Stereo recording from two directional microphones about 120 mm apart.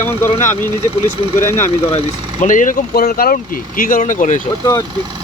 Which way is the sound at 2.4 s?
90° left.